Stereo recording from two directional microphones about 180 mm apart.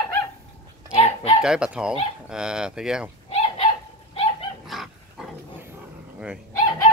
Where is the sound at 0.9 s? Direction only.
35° left (ahead or behind).